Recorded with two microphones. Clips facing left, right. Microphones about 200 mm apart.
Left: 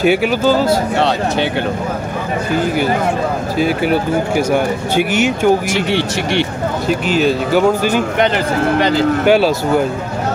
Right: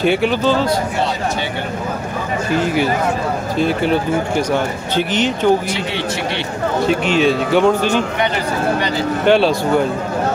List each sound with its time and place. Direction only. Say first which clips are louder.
0.0 s speech: left 2 dB; 5° left (ahead or behind)
0.9 s speech: left 4 dB; 70° left (ahead or behind)
3.5 s speech: left 1 dB; 5° left (ahead or behind)
6.9 s speech: left 1 dB; centre (ahead or behind)
9.2 s speech: right 1 dB; 5° left (ahead or behind)